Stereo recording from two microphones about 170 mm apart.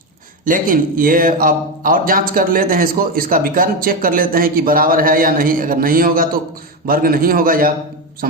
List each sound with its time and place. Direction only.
0.4 s a man's voice: 55° right (ahead or behind)